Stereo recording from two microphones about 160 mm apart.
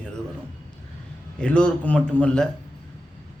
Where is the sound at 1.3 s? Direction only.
5° left (ahead or behind).